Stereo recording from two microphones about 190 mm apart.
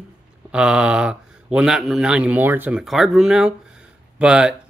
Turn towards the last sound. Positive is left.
turn(degrees=-5)  # may be behind; listen again after turning